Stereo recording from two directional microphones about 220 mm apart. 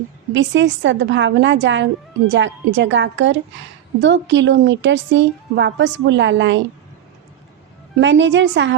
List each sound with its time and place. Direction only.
0.3 s a woman's voice: 55° right (ahead or behind)
7.9 s a woman's voice: 55° right (ahead or behind)